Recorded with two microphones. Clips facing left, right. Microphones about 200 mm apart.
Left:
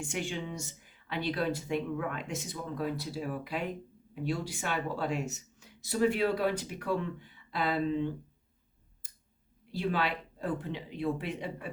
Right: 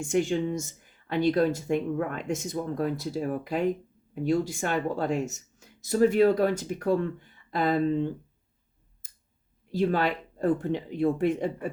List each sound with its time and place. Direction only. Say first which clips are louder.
0.0 s speech: right 10 dB; 45° right (ahead or behind)
9.0 s clicking: left 1 dB; 45° right (ahead or behind)
9.7 s speech: right 6 dB; 45° right (ahead or behind)